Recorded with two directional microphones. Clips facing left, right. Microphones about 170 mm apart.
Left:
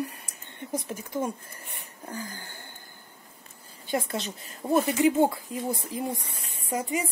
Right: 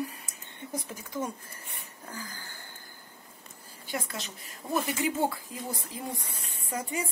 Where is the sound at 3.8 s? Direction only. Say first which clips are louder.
Left 7 dB; 25° left (ahead or behind).